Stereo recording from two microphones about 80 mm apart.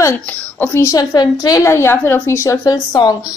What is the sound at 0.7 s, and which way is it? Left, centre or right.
Speech, left.